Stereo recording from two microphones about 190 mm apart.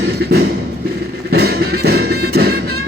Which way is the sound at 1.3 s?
55° right (ahead or behind).